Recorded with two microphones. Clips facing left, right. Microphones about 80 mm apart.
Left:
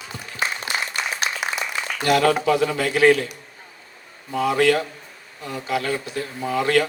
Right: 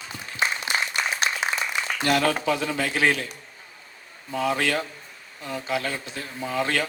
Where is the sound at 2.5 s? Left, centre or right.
Left.